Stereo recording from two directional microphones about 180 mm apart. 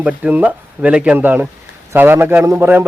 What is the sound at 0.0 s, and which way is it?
A man's voice, 10° right (ahead or behind).